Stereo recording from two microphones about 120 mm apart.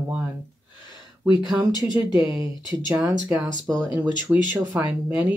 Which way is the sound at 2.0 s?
20° right (ahead or behind).